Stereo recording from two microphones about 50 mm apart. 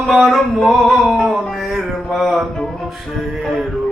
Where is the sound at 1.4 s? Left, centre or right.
Centre.